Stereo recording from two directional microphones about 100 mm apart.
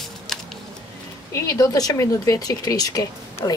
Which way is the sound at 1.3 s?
35° left (ahead or behind).